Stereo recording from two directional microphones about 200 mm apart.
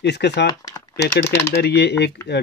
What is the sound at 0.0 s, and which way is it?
Speech, 60° left (ahead or behind).